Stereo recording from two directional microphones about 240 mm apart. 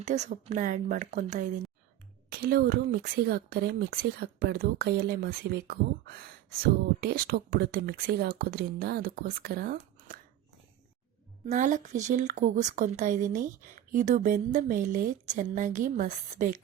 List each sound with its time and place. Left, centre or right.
0.0 s speech: right
11.4 s speech: right